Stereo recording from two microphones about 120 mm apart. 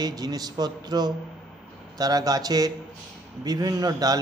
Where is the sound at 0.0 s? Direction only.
35° right (ahead or behind).